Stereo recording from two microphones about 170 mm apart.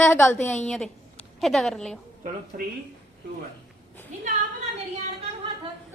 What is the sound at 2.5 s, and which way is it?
Speech, 50° right (ahead or behind).